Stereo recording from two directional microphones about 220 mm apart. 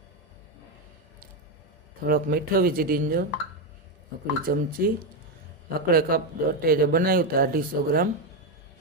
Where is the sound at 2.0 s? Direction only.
40° right (ahead or behind).